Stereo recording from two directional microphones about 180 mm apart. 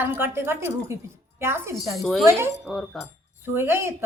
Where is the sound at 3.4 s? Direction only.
15° right (ahead or behind).